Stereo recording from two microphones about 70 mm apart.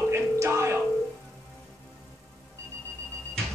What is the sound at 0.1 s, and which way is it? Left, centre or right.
Music, right.